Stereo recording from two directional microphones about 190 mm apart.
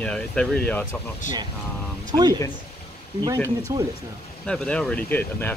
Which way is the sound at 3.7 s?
15° right (ahead or behind).